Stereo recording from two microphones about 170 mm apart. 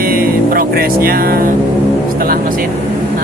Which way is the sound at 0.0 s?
60° right (ahead or behind).